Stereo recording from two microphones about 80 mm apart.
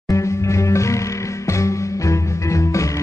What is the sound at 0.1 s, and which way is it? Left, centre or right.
Music, left.